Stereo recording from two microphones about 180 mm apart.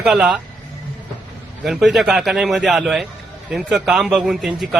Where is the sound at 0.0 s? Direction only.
Centre (ahead or behind).